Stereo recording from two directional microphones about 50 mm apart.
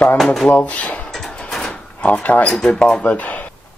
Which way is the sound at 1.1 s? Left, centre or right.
Centre.